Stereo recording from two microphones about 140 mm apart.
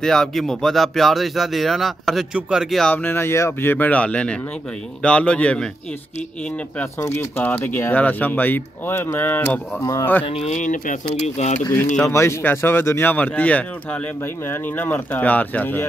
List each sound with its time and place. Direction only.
0.0 s speech: 5° left (ahead or behind)
7.2 s speech: 15° left (ahead or behind)
10.2 s speech: 45° left (ahead or behind)
10.5 s speech: 65° left (ahead or behind)
11.2 s speech: 55° left (ahead or behind)
11.6 s speech: 20° left (ahead or behind)